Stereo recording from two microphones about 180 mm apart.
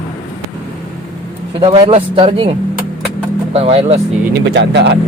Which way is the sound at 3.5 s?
35° right (ahead or behind).